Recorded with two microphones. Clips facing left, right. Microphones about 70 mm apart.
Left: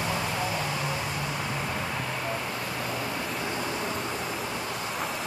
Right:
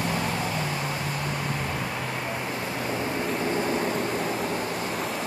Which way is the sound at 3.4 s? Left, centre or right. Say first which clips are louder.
Right 7 dB; right.